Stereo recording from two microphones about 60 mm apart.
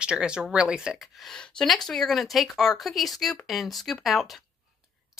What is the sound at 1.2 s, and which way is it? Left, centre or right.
Speech, centre.